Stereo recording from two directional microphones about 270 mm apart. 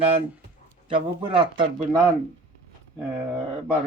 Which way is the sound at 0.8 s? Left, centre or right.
Centre.